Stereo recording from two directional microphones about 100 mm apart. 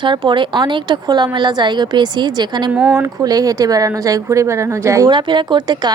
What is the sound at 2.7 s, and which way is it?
Speech, 10° right (ahead or behind).